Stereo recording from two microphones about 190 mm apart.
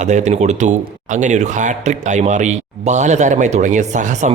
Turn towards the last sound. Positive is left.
turn(degrees=-40)  # may be behind; listen again after turning